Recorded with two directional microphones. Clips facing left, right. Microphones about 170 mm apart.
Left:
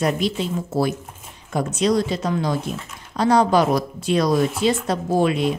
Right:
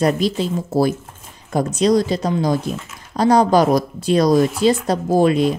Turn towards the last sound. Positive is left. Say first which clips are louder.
# right 4 dB
turn(degrees=-40)  # may be behind; listen again after turning